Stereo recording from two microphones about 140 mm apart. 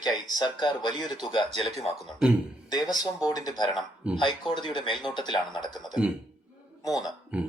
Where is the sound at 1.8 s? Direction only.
Centre (ahead or behind).